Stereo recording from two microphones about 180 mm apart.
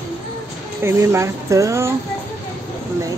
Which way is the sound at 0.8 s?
15° right (ahead or behind).